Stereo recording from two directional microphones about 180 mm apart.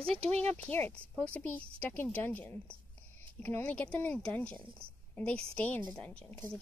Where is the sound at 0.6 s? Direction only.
10° left (ahead or behind).